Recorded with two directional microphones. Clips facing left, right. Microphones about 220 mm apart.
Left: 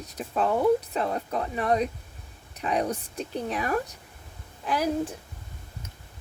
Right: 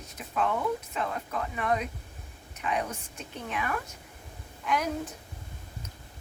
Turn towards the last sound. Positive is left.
turn(degrees=35)  # may be behind; listen again after turning